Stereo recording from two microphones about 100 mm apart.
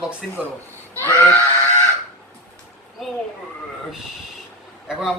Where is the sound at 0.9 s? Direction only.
20° left (ahead or behind).